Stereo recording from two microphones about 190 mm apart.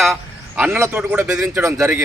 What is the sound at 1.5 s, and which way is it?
Speech, 20° right (ahead or behind).